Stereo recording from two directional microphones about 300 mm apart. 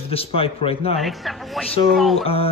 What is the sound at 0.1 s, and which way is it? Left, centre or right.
Speech, centre.